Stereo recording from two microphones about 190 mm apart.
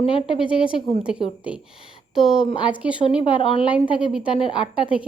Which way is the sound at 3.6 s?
5° right (ahead or behind).